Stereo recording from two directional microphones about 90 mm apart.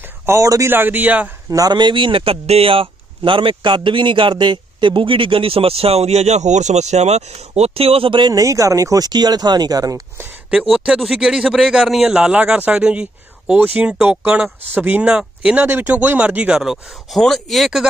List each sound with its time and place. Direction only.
0.3 s speech: 35° right (ahead or behind)
0.7 s speech: 20° right (ahead or behind)
1.5 s a man's voice: 50° right (ahead or behind); by 5.9 s 90° right
7.7 s speech: 90° right; by 8.4 s 60° right (ahead or behind)
8.4 s speech: 35° right (ahead or behind)
10.5 s speech: 5° right (ahead or behind)